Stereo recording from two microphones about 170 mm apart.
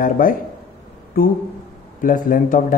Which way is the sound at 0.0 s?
55° left (ahead or behind).